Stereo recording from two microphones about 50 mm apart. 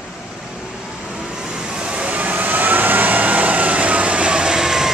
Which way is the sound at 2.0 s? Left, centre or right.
Right.